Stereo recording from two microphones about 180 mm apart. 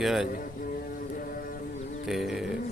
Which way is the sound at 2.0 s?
Centre (ahead or behind).